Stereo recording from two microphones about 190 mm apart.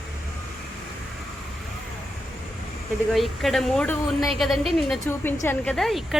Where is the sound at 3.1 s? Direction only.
Centre (ahead or behind).